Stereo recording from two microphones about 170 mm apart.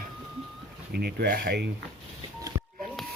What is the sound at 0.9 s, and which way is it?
Speech, 70° right (ahead or behind).